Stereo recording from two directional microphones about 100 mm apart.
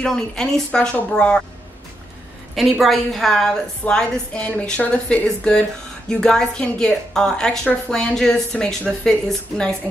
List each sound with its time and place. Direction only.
0.0 s a woman's voice: 5° left (ahead or behind)
2.5 s a woman's voice: centre (ahead or behind)